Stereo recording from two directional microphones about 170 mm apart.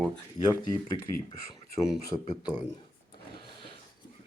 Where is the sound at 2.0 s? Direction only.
20° left (ahead or behind).